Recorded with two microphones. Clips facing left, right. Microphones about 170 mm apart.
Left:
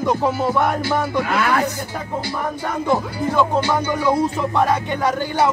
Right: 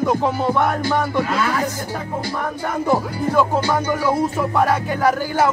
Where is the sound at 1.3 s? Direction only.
65° left (ahead or behind).